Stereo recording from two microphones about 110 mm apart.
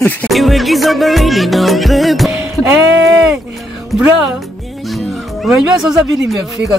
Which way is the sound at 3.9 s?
10° right (ahead or behind).